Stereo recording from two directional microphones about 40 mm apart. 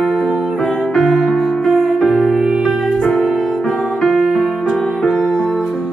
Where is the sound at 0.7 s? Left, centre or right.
Centre.